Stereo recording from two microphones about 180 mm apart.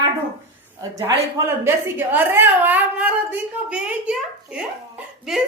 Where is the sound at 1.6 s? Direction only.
10° right (ahead or behind).